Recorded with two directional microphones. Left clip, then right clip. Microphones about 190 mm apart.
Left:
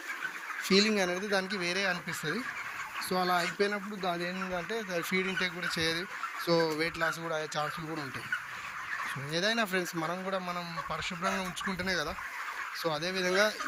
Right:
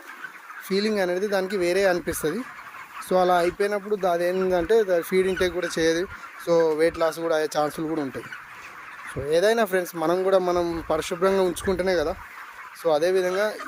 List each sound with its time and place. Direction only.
0.7 s speech: 35° right (ahead or behind)
7.1 s speech: 55° right (ahead or behind)
9.3 s speech: 40° right (ahead or behind)
12.8 s speech: 50° right (ahead or behind)